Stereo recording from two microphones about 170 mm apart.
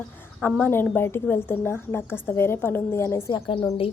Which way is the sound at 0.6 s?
10° left (ahead or behind).